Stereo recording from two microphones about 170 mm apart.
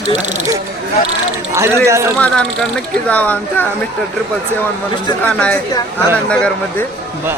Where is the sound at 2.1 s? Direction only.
5° left (ahead or behind).